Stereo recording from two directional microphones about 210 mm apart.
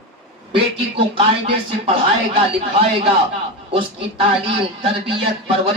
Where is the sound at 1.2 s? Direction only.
25° right (ahead or behind).